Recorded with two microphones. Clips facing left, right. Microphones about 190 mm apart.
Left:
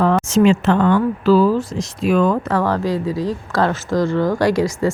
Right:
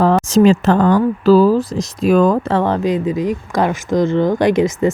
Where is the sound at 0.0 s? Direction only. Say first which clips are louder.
Right 3 dB; 35° right (ahead or behind).